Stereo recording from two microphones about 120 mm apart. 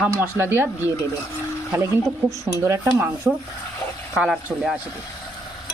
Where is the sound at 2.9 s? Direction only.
15° right (ahead or behind).